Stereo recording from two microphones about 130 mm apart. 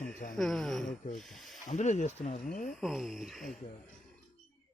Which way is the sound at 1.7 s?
65° left (ahead or behind).